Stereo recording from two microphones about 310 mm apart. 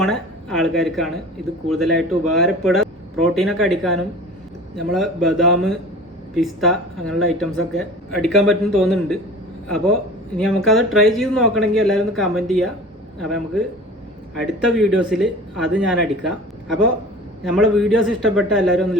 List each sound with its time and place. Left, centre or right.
0.0 s speech: centre
17.4 s speech: centre